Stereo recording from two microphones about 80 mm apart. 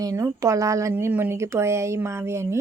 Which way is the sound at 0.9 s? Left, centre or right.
Right.